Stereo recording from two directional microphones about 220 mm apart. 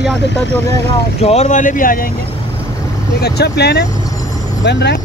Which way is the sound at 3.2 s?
45° left (ahead or behind).